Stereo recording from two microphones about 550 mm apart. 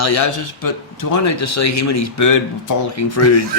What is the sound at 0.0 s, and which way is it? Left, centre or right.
Speech, left.